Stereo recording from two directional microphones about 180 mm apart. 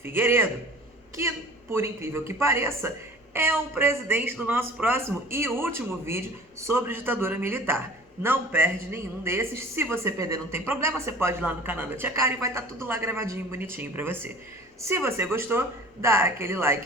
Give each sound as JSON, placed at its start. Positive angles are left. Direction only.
{"t": 0.0, "sound": "a woman's voice", "side_deg": -10}